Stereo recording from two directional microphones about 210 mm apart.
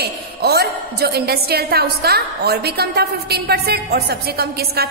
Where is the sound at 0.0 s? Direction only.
50° right (ahead or behind).